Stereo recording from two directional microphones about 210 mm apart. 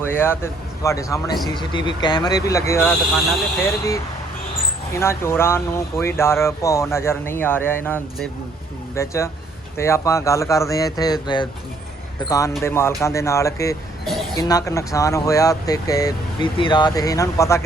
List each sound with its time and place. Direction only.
0.0 s speech: 10° left (ahead or behind)
12.6 s speech: 10° left (ahead or behind)
14.0 s a sound: centre (ahead or behind)
14.3 s speech: 15° left (ahead or behind)